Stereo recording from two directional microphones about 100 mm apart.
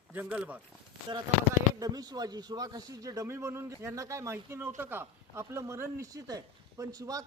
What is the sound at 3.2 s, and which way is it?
A man's voice, 25° right (ahead or behind).